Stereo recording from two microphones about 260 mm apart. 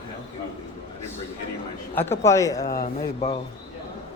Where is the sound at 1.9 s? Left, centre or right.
Centre.